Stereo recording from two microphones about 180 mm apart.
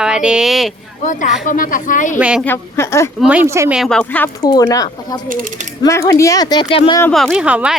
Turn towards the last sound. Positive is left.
turn(degrees=-5)  # may be behind; listen again after turning